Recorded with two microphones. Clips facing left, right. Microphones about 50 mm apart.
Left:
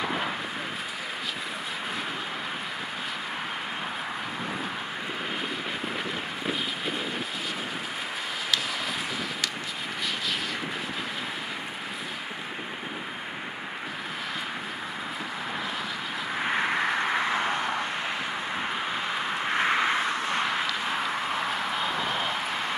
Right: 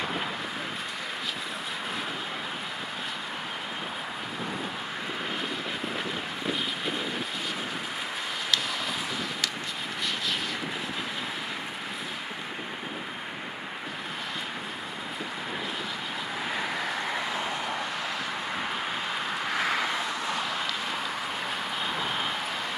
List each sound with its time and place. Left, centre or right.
6.4 s wind noise: centre
16.4 s vehicle: left
19.1 s vehicle: centre